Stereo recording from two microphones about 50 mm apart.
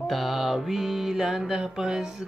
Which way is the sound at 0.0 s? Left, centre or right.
Centre.